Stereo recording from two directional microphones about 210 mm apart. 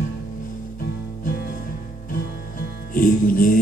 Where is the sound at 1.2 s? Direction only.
45° left (ahead or behind).